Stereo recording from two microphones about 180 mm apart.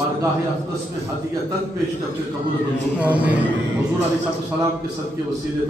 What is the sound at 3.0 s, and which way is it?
Speech, 10° right (ahead or behind).